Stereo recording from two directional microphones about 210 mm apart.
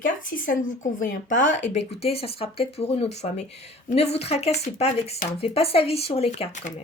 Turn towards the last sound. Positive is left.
turn(degrees=35)  # may be behind; listen again after turning